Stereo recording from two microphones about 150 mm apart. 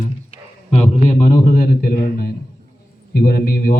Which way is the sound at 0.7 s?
50° left (ahead or behind).